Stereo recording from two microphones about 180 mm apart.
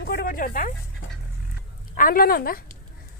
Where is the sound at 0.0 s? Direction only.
55° left (ahead or behind).